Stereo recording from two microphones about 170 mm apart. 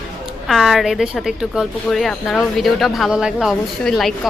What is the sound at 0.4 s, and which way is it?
Speech, centre (ahead or behind).